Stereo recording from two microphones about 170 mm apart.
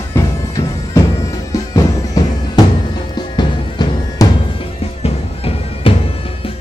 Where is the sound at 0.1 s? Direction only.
20° left (ahead or behind).